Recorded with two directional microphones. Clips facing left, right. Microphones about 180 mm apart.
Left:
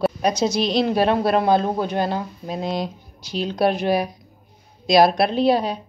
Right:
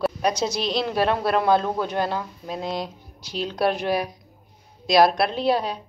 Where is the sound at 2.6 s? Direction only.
5° right (ahead or behind).